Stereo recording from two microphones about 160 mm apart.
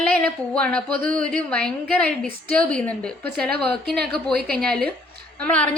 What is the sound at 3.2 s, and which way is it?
A woman's voice, 75° right (ahead or behind).